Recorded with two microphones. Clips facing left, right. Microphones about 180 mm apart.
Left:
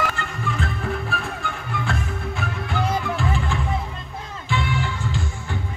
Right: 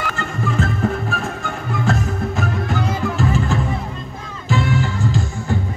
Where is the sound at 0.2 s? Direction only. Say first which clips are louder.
Right 6 dB; 40° right (ahead or behind).